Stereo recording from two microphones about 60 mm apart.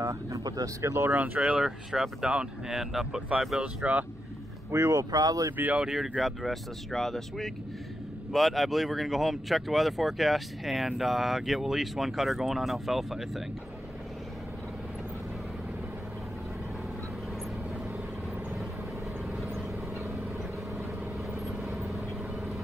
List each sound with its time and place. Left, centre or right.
0.0 s speech: right
0.4 s speech: right
0.8 s speech: right
1.1 s speech: right
1.4 s speech: centre
3.6 s speech: right
4.6 s speech: right
5.9 s speech: centre
21.6 s vehicle: centre